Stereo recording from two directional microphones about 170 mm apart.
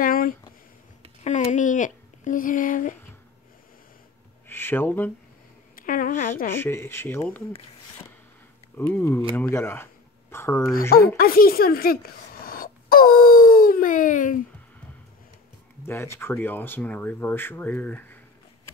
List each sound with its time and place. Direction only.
0.0 s a sound: 55° left (ahead or behind)
1.2 s speech: 45° left (ahead or behind)
4.5 s speech: 15° left (ahead or behind)
5.8 s a sound: 55° left (ahead or behind)
6.5 s speech: 15° left (ahead or behind)
8.7 s speech: 15° left (ahead or behind)
11.1 s speech: 60° left (ahead or behind)
15.8 s speech: 15° left (ahead or behind)